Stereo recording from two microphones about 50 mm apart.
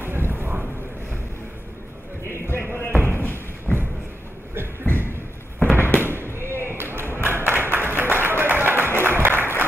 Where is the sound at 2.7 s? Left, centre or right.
Left.